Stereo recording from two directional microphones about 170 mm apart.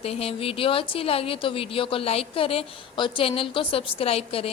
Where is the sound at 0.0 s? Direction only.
35° left (ahead or behind).